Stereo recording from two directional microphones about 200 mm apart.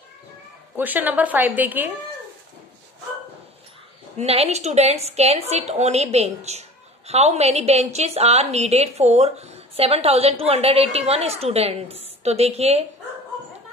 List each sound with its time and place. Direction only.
0.7 s a woman's voice: 10° right (ahead or behind)
4.2 s a woman's voice: 30° right (ahead or behind)